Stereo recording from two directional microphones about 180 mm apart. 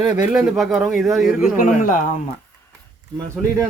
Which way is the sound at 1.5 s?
50° left (ahead or behind).